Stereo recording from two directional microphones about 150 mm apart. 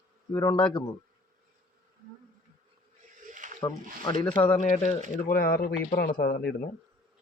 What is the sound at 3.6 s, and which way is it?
Speech, 25° left (ahead or behind).